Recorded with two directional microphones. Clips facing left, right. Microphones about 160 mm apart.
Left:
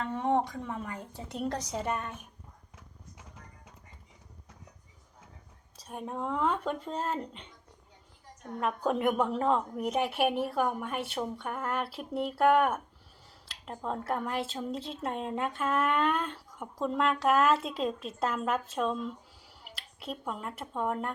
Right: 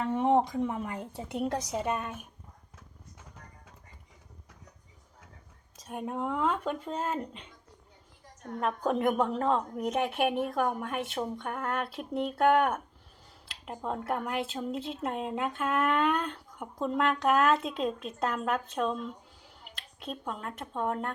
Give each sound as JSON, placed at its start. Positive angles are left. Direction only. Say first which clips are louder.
{"t": 0.0, "sound": "a sound", "louder": "right 3 dB", "side_deg": -15}
{"t": 1.3, "sound": "a woman's voice", "louder": "right 2 dB", "side_deg": -15}
{"t": 5.9, "sound": "speech", "louder": "right 2 dB", "side_deg": -5}
{"t": 8.6, "sound": "speech", "louder": "right 1 dB", "side_deg": 5}